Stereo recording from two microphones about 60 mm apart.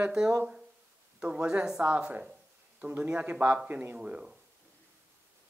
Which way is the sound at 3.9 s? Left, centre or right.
Centre.